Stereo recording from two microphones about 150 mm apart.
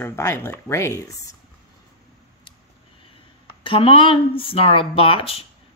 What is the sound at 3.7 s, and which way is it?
Speech, 35° left (ahead or behind).